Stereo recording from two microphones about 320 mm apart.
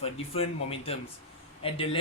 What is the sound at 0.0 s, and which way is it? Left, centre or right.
Speech, centre.